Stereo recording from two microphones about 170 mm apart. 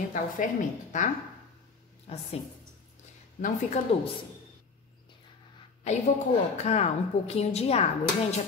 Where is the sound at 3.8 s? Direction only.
45° left (ahead or behind).